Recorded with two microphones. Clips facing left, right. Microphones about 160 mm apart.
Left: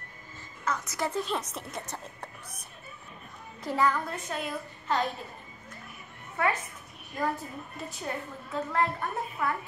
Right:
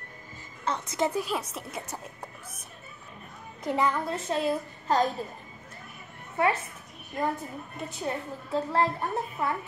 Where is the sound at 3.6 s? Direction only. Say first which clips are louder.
Right 1 dB; 20° right (ahead or behind).